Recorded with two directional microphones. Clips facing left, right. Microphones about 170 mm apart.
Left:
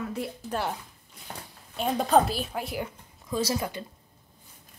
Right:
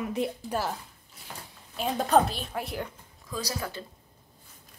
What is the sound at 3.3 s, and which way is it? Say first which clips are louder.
Speech: left 6 dB; 25° left (ahead or behind).